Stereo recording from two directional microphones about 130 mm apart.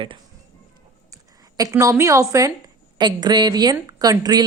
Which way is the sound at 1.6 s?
25° right (ahead or behind).